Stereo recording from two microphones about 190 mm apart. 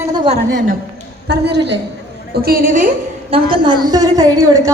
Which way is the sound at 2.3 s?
50° right (ahead or behind).